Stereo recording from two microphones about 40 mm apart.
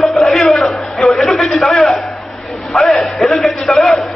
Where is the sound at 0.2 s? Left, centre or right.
Centre.